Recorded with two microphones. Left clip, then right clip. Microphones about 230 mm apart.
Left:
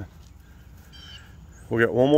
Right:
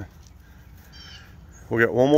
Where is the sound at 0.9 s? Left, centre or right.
Left.